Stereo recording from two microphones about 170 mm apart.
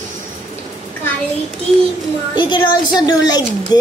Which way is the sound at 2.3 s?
25° left (ahead or behind).